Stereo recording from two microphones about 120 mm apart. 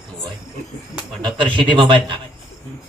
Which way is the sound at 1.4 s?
45° right (ahead or behind).